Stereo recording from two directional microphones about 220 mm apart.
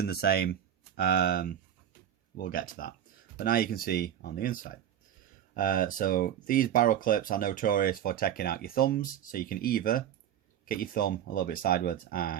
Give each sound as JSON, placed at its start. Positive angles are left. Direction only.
{"t": 0.0, "sound": "speech", "side_deg": 45}